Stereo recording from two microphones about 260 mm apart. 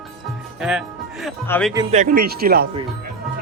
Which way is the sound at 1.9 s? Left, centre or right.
Right.